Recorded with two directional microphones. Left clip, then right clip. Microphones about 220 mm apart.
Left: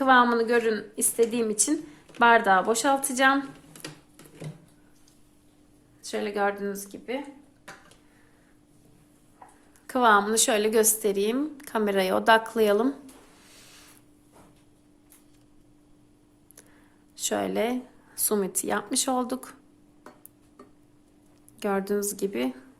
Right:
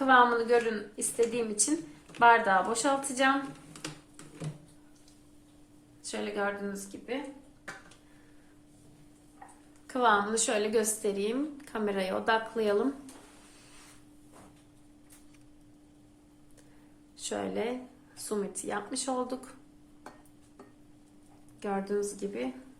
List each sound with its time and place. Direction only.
0.0 s a woman's voice: 45° left (ahead or behind)
6.0 s a woman's voice: 45° left (ahead or behind)
9.8 s a woman's voice: 50° left (ahead or behind)
17.2 s a woman's voice: 45° left (ahead or behind)
21.6 s a woman's voice: 45° left (ahead or behind)